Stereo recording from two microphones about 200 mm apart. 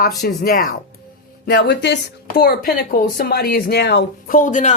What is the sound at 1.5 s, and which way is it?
Speech, 60° left (ahead or behind).